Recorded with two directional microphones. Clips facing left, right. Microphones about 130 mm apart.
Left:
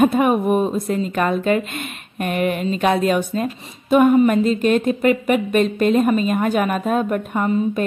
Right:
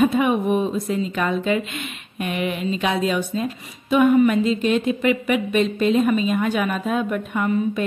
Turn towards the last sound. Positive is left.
turn(degrees=45)  # may be behind; listen again after turning